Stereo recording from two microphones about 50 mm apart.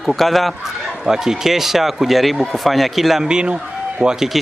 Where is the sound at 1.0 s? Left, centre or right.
Centre.